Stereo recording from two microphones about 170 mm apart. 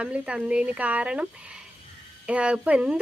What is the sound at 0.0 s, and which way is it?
Speech, 5° right (ahead or behind).